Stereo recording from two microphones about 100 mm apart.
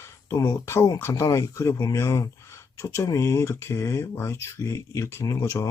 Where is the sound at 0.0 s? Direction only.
30° left (ahead or behind).